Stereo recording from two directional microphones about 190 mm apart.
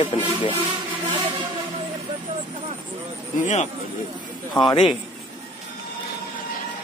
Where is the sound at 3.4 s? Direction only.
40° left (ahead or behind).